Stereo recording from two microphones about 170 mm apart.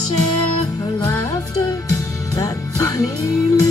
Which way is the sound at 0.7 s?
20° left (ahead or behind).